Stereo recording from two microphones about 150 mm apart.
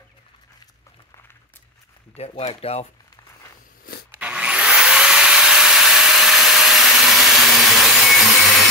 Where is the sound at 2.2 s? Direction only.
45° left (ahead or behind).